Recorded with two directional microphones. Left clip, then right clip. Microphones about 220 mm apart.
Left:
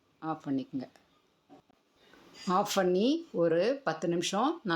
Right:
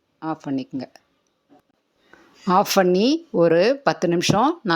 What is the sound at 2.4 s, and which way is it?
Speech, 35° right (ahead or behind).